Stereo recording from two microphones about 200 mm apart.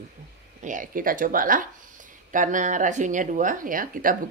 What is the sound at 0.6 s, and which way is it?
Speech, 40° right (ahead or behind).